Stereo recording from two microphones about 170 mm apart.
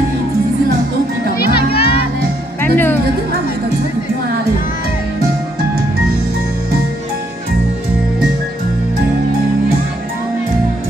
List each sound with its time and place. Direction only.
1.4 s music: 70° left (ahead or behind)
2.6 s speech: 10° left (ahead or behind)